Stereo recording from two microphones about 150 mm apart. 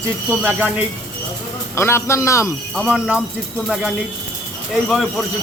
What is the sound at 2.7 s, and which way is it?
Speech, 5° right (ahead or behind).